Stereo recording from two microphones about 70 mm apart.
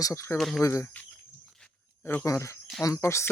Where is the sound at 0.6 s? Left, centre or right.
Left.